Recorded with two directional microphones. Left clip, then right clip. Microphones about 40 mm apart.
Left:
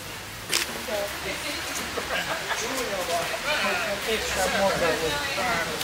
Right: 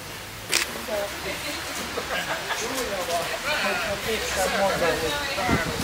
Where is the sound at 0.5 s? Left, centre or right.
Right.